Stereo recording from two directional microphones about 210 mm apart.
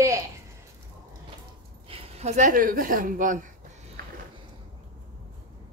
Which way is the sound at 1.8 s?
30° right (ahead or behind).